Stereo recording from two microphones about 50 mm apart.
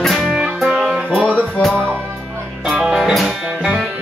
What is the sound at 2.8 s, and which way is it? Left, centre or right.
Music, centre.